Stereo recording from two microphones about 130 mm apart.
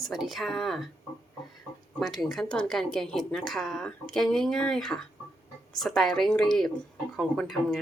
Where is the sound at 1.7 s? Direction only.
25° left (ahead or behind).